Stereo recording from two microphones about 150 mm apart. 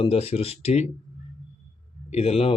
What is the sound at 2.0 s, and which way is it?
Speech, 45° left (ahead or behind).